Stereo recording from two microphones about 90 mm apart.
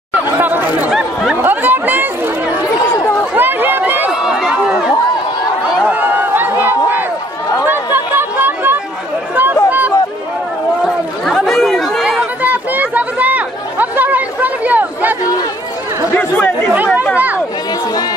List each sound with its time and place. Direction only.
0.1 s chatter: 20° right (ahead or behind)
3.3 s run: 25° right (ahead or behind)
4.1 s crowd: 5° right (ahead or behind)
5.9 s a sound: 20° right (ahead or behind)
7.6 s chatter: 25° right (ahead or behind)
9.7 s a sound: 20° right (ahead or behind)
11.2 s chatter: centre (ahead or behind)
12.1 s chatter: 15° right (ahead or behind)
16.2 s chatter: 20° left (ahead or behind)
16.7 s chatter: 15° right (ahead or behind)